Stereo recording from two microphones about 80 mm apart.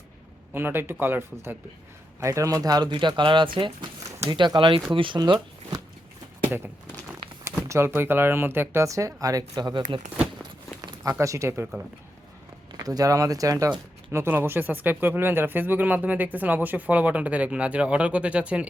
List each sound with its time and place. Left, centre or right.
0.5 s speech: right
2.2 s speech: right
2.9 s speech: right
4.3 s speech: right
4.9 s speech: right
7.7 s speech: right
11.2 s speech: right
12.7 s speech: right
14.3 s speech: right